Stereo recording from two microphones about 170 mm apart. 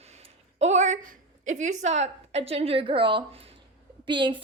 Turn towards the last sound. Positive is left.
turn(degrees=-30)  # may be behind; listen again after turning